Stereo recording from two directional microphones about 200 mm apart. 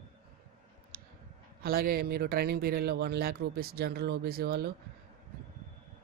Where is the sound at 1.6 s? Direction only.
50° right (ahead or behind).